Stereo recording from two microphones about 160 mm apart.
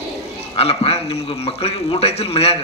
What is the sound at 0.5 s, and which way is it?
A man's voice, 40° left (ahead or behind).